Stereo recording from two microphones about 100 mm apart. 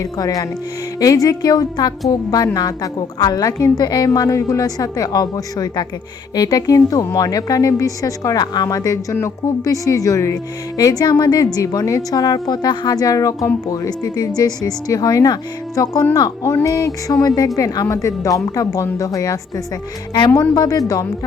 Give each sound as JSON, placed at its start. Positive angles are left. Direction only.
{"t": 0.0, "sound": "a woman's voice", "side_deg": 35}